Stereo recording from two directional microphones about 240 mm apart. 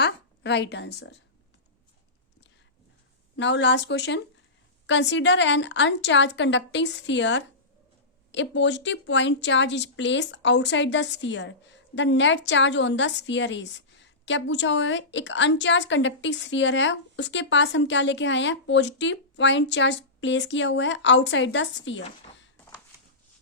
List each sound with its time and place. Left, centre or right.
0.0 s a woman's voice: left
3.3 s a woman's voice: left